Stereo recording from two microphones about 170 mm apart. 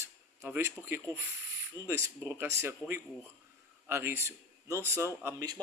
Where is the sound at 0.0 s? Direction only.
15° right (ahead or behind).